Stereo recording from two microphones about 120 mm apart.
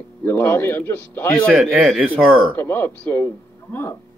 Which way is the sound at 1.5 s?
Centre (ahead or behind).